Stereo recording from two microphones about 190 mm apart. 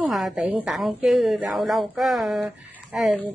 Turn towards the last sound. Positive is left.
turn(degrees=-5)  # may be behind; listen again after turning